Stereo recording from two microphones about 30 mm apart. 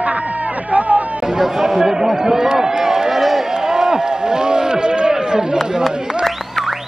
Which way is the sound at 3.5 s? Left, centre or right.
Right.